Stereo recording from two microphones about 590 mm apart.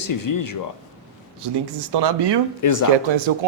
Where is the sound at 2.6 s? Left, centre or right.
Left.